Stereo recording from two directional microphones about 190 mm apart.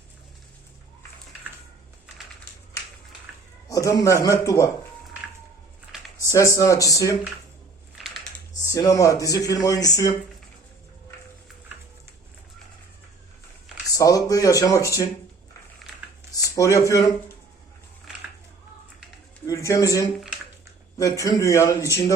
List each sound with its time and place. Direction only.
3.7 s a man's voice: 15° left (ahead or behind)
6.3 s speech: 15° left (ahead or behind)
7.9 s typing: centre (ahead or behind)
8.6 s speech: 15° left (ahead or behind)
13.9 s speech: 20° left (ahead or behind)
16.6 s speech: 15° left (ahead or behind)
19.5 s speech: 15° left (ahead or behind)